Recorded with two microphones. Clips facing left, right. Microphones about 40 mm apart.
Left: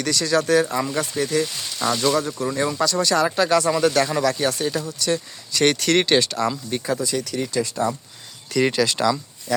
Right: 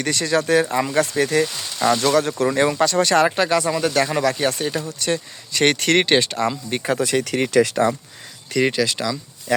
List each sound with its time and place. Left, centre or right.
0.0 s speech: right
1.2 s speech: right
3.5 s speech: centre
4.1 s speech: right
6.7 s speech: right
8.5 s speech: centre